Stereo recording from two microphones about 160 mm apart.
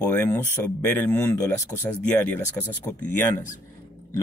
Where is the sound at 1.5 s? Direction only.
15° left (ahead or behind).